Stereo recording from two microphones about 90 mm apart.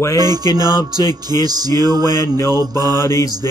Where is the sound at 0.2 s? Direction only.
45° right (ahead or behind).